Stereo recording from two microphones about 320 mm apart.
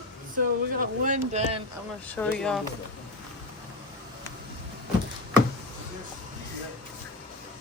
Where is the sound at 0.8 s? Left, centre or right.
Right.